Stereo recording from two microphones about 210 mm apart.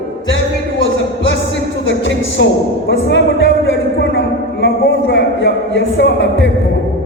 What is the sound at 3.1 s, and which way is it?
Music, 55° left (ahead or behind).